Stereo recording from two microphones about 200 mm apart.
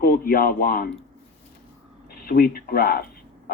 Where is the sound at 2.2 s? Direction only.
50° left (ahead or behind).